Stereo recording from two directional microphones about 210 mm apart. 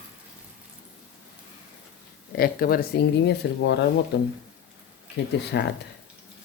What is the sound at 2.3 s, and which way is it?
Speech, 45° left (ahead or behind).